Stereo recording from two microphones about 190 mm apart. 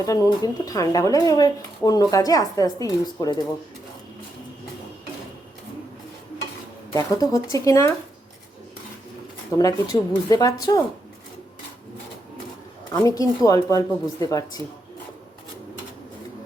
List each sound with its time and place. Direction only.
0.0 s speech: 20° left (ahead or behind)
6.9 s speech: 20° left (ahead or behind)
9.6 s speech: 20° left (ahead or behind)
13.1 s speech: 20° left (ahead or behind)